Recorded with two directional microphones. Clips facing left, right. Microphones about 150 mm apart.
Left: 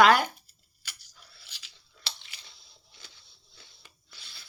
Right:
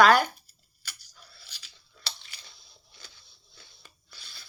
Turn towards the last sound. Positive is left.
turn(degrees=25)  # may be behind; listen again after turning